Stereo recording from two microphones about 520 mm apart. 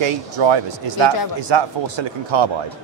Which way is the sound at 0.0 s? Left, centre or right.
Right.